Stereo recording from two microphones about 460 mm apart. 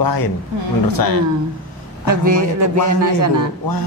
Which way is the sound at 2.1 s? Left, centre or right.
Right.